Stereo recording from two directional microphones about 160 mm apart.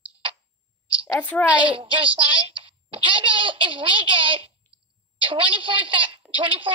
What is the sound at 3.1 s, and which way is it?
A woman's voice, 30° right (ahead or behind).